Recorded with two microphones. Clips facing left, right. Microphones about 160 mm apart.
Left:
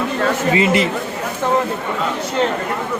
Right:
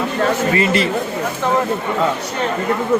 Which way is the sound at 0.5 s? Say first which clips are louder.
Left 1 dB; 15° left (ahead or behind).